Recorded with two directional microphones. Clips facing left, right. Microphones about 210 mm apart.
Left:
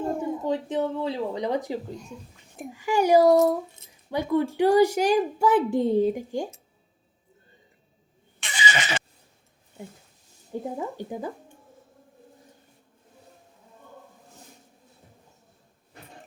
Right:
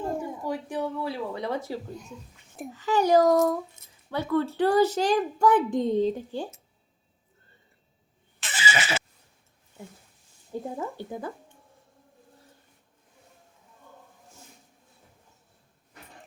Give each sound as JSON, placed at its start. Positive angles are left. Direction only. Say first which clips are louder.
{"t": 0.2, "sound": "a child's voice", "louder": "left 5 dB", "side_deg": 20}
{"t": 8.4, "sound": "neigh", "louder": "left 1 dB", "side_deg": -5}
{"t": 10.8, "sound": "a child's voice", "louder": "left 2 dB", "side_deg": 15}